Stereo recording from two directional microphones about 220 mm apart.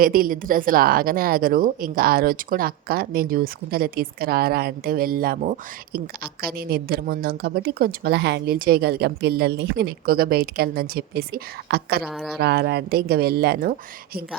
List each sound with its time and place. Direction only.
0.0 s a woman's voice: 40° right (ahead or behind)
12.0 s speech: centre (ahead or behind)
12.4 s a woman's voice: 45° right (ahead or behind)